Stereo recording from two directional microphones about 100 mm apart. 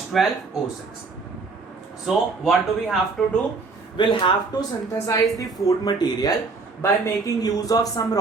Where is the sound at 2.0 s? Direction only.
Centre (ahead or behind).